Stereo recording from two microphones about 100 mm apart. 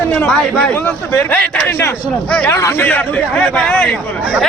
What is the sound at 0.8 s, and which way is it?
A man's voice, 20° left (ahead or behind).